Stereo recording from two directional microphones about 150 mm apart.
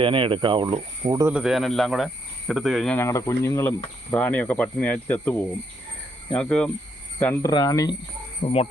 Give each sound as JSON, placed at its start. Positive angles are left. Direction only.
{"t": 0.0, "sound": "speech", "side_deg": -35}
{"t": 1.3, "sound": "speech", "side_deg": -5}
{"t": 2.9, "sound": "speech", "side_deg": 20}
{"t": 7.5, "sound": "speech", "side_deg": 25}
{"t": 8.4, "sound": "speech", "side_deg": 40}